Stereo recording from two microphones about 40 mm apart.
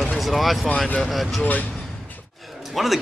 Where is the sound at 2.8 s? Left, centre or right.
Centre.